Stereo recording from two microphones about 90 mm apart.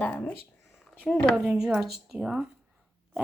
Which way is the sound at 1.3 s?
5° right (ahead or behind).